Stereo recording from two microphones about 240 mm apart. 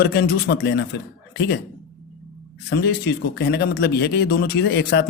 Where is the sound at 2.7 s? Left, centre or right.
Left.